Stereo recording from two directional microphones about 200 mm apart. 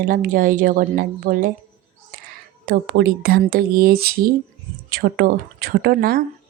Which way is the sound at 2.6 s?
50° right (ahead or behind).